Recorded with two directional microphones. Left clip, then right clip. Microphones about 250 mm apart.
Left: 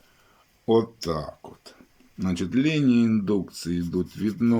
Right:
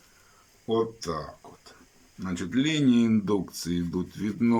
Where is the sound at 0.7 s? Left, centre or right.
Centre.